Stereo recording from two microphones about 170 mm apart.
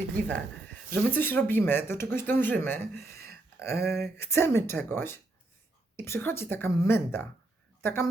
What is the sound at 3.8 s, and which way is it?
Speech, 65° right (ahead or behind).